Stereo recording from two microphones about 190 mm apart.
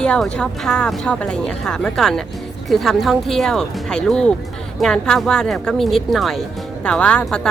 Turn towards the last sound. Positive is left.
turn(degrees=5)  # may be behind; listen again after turning